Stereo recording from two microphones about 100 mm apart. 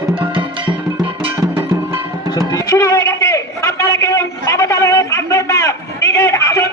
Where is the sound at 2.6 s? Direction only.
35° left (ahead or behind).